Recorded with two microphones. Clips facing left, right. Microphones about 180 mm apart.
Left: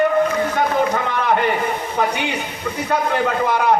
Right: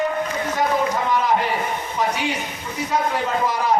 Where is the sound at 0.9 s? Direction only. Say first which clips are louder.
Left 1 dB; 65° left (ahead or behind).